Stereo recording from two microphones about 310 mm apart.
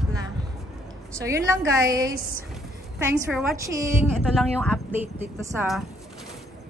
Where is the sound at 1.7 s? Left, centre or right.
Centre.